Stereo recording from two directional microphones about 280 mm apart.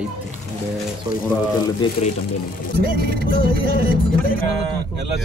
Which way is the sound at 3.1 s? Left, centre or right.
Right.